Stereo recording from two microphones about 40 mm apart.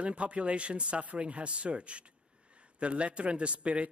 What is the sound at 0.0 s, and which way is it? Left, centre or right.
A man's voice, right.